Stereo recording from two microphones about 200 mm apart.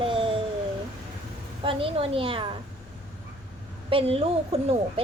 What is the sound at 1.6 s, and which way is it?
Speech, 25° right (ahead or behind).